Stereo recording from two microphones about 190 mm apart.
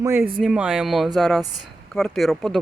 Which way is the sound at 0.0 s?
15° right (ahead or behind).